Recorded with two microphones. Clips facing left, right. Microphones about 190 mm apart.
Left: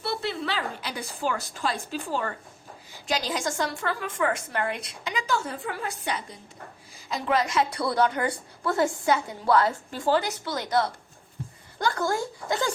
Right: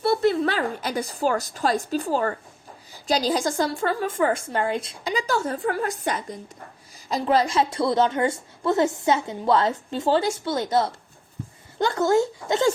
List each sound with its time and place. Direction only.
0.0 s a woman's voice: 45° right (ahead or behind)
7.1 s a woman's voice: 30° right (ahead or behind)